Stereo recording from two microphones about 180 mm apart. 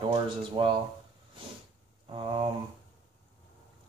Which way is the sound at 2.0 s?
30° right (ahead or behind).